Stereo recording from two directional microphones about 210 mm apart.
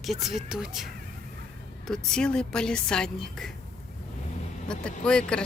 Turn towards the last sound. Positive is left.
turn(degrees=5)  # may be behind; listen again after turning